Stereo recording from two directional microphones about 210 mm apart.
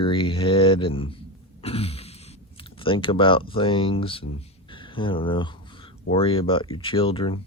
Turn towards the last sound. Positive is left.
turn(degrees=25)  # may be behind; listen again after turning